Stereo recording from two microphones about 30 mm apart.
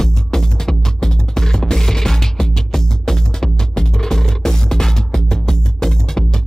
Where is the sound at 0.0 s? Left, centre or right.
Centre.